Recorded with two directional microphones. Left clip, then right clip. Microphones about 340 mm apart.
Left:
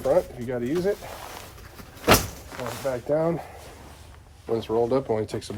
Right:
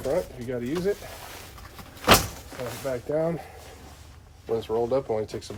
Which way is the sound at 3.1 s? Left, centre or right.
Centre.